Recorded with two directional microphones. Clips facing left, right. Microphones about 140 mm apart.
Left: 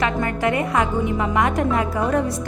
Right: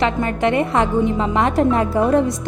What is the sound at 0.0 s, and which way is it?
A woman's voice, 25° right (ahead or behind).